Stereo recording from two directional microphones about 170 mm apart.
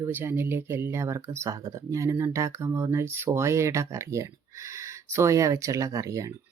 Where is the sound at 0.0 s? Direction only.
10° right (ahead or behind).